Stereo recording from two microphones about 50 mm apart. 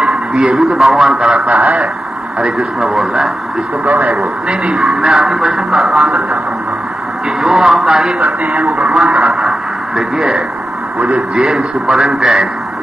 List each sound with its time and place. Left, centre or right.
0.3 s a man's voice: centre
0.6 s a man's voice: centre
1.1 s speech: centre
2.9 s a man's voice: centre
4.7 s speech: centre
7.4 s a man's voice: centre